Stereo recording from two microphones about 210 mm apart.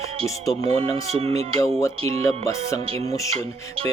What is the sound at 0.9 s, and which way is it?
Speech, 30° right (ahead or behind).